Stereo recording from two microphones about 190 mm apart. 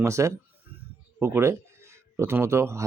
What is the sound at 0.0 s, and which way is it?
Speech, 15° right (ahead or behind).